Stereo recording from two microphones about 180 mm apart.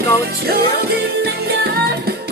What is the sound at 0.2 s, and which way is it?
Music, 60° right (ahead or behind).